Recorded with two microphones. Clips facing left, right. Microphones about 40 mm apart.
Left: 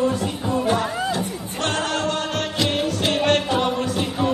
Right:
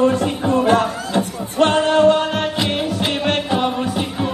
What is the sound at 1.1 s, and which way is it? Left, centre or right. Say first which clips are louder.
Music: right 4 dB; right.